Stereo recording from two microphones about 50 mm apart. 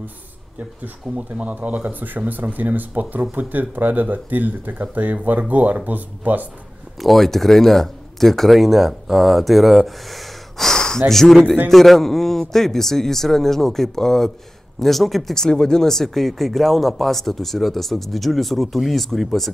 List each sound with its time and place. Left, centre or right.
1.1 s speech: right
7.0 s a man's voice: centre